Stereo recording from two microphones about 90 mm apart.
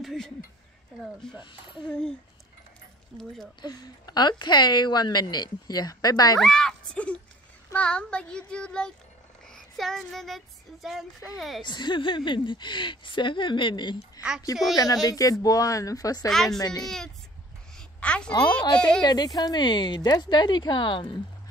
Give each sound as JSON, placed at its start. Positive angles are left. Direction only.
{"t": 0.0, "sound": "child singing", "side_deg": 0}
{"t": 1.4, "sound": "speech", "side_deg": 65}
{"t": 3.1, "sound": "child singing", "side_deg": 5}
{"t": 3.6, "sound": "a woman's voice", "side_deg": 50}
{"t": 6.4, "sound": "child singing", "side_deg": 5}
{"t": 11.6, "sound": "speech", "side_deg": 55}
{"t": 15.0, "sound": "speech", "side_deg": 40}
{"t": 16.3, "sound": "child singing", "side_deg": 5}
{"t": 16.5, "sound": "a woman's voice", "side_deg": 45}
{"t": 17.7, "sound": "a sound", "side_deg": 10}
{"t": 18.7, "sound": "child singing", "side_deg": 10}
{"t": 19.0, "sound": "speech", "side_deg": 50}